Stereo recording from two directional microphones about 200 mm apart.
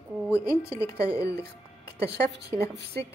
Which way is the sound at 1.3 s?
55° right (ahead or behind).